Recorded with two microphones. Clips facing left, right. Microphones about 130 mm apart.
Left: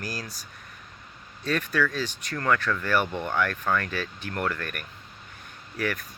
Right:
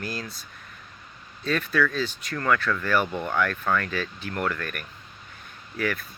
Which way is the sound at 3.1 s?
10° right (ahead or behind).